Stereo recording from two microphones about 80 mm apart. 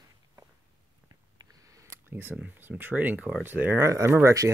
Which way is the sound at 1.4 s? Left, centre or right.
Right.